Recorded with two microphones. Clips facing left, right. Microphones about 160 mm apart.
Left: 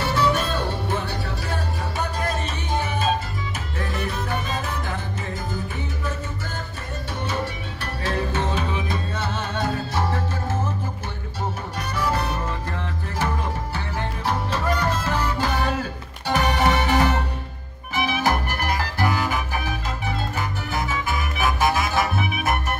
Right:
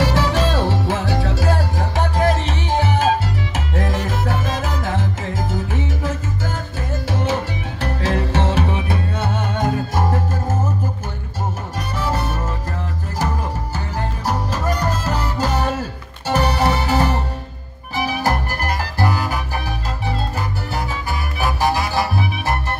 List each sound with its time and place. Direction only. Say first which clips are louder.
0.0 s music: right 4 dB; 90° right; by 10.2 s 45° right (ahead or behind)
13.9 s music: right 3 dB; 40° right (ahead or behind)